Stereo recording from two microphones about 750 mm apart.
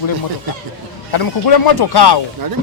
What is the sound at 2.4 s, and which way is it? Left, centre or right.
Speech, right.